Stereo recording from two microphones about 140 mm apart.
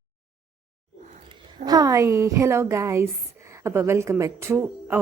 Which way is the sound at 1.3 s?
25° right (ahead or behind).